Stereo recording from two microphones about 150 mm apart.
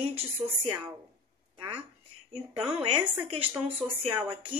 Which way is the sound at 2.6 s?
35° right (ahead or behind).